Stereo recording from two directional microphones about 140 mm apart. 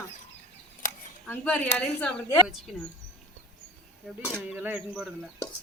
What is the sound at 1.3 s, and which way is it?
Speech, 10° left (ahead or behind).